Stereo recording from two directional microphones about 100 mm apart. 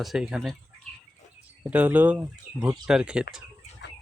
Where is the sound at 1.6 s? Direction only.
15° right (ahead or behind).